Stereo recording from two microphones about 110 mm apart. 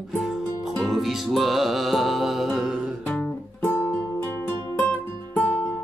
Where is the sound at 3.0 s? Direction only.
15° left (ahead or behind).